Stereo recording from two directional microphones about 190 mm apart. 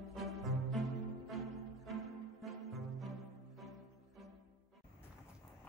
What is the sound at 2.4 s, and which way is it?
Music, centre (ahead or behind).